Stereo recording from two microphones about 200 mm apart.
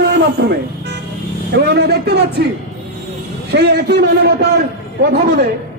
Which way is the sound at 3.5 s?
55° right (ahead or behind).